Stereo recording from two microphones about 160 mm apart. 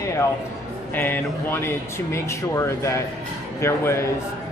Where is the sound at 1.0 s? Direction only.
10° left (ahead or behind).